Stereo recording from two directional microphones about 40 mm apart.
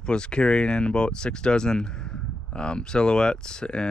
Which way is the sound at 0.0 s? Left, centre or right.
Left.